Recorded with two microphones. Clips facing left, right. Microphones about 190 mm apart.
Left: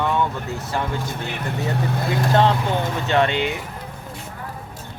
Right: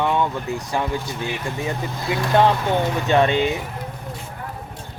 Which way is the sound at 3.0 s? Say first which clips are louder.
Right 2 dB; 15° right (ahead or behind).